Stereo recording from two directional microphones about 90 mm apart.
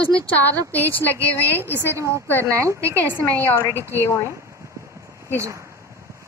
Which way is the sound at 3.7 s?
30° right (ahead or behind).